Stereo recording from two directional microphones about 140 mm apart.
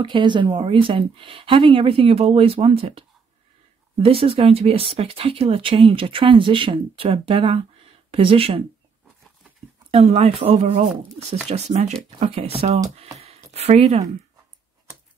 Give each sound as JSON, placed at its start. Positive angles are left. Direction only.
{"t": 0.0, "sound": "speech", "side_deg": -35}
{"t": 9.8, "sound": "speech", "side_deg": -50}
{"t": 13.2, "sound": "a sound", "side_deg": -50}